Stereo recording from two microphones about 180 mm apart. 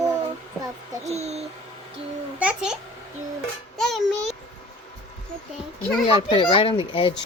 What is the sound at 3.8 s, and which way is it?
Music, centre (ahead or behind).